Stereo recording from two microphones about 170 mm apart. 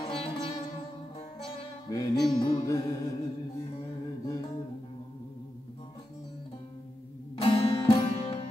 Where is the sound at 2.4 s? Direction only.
25° left (ahead or behind).